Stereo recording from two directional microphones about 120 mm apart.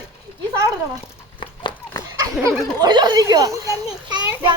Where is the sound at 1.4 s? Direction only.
40° left (ahead or behind).